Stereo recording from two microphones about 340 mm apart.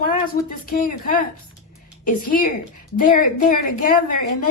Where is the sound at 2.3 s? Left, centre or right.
Left.